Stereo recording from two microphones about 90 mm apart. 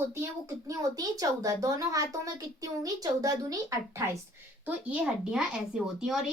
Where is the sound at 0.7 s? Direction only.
45° right (ahead or behind).